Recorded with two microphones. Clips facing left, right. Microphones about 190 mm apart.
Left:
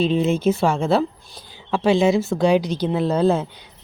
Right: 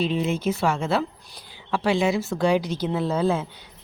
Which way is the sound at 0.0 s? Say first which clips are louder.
Left 5 dB; 25° left (ahead or behind).